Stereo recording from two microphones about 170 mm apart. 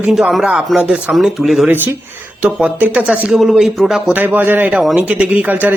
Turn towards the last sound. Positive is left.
turn(degrees=-10)  # may be behind; listen again after turning